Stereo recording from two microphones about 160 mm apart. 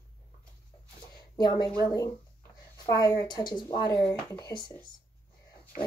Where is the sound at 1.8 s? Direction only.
20° left (ahead or behind).